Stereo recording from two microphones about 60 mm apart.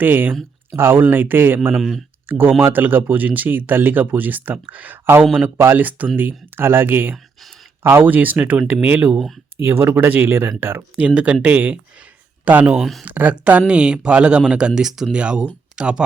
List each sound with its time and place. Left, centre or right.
0.0 s speech: right
1.7 s speech: centre
2.2 s speech: right
9.6 s speech: right
10.9 s speech: centre
12.7 s speech: centre
13.1 s a man's voice: right; by 15.2 s centre
15.2 s a man's voice: centre